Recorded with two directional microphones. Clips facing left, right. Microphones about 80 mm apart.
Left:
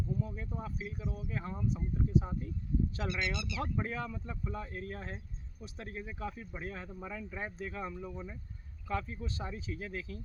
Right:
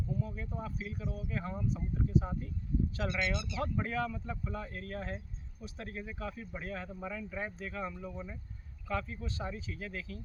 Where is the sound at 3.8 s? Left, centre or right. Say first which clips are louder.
Right 3 dB; centre.